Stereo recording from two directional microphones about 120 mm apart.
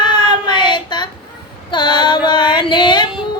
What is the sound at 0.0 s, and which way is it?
Child singing, 40° left (ahead or behind).